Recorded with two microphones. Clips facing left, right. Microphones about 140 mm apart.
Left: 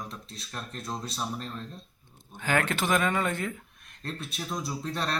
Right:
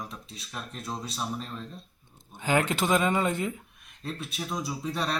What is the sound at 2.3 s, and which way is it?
Speech, 20° right (ahead or behind).